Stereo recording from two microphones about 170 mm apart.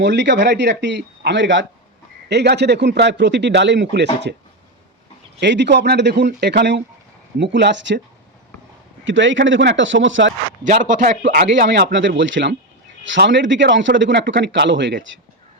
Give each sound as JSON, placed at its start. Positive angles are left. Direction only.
{"t": 0.0, "sound": "speech", "side_deg": -90}
{"t": 5.4, "sound": "speech", "side_deg": -90}
{"t": 9.0, "sound": "speech", "side_deg": -90}
{"t": 10.6, "sound": "a man's voice", "side_deg": -50}
{"t": 11.2, "sound": "speech", "side_deg": -75}